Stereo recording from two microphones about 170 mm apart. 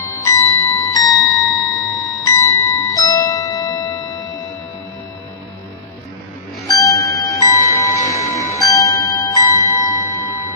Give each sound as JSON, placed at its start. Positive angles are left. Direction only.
{"t": 0.2, "sound": "music", "side_deg": 20}
{"t": 6.7, "sound": "music", "side_deg": 20}